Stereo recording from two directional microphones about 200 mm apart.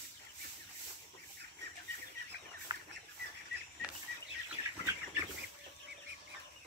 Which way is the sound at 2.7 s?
20° right (ahead or behind).